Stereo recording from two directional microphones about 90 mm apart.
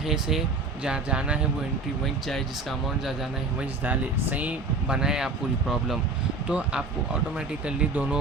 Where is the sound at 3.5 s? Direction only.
15° right (ahead or behind).